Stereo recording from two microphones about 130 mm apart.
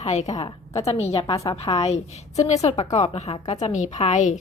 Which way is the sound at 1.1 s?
25° left (ahead or behind).